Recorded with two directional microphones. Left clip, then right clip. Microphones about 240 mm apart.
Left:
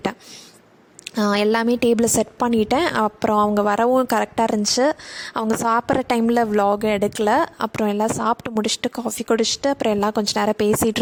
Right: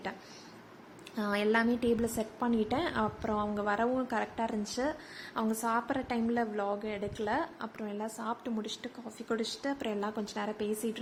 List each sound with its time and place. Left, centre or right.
1.1 s a woman's voice: left